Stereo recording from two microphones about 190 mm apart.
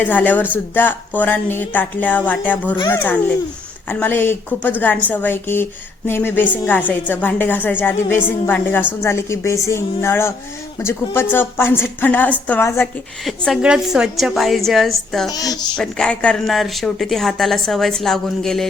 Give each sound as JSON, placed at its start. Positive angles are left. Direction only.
{"t": 0.0, "sound": "speech", "side_deg": 10}
{"t": 13.2, "sound": "speech", "side_deg": 0}
{"t": 15.3, "sound": "a woman's voice", "side_deg": 20}
{"t": 15.7, "sound": "speech", "side_deg": 5}